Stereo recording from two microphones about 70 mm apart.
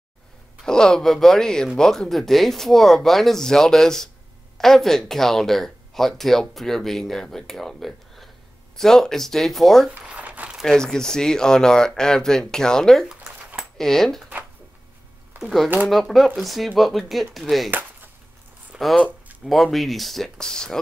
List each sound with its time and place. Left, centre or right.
0.7 s speech: centre
9.9 s crumpling: right
10.6 s speech: centre
13.1 s a sound: centre
13.7 s speech: centre
15.9 s speech: centre
18.7 s a sound: centre
19.4 s speech: centre